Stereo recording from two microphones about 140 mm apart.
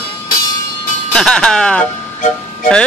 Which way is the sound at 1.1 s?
5° left (ahead or behind).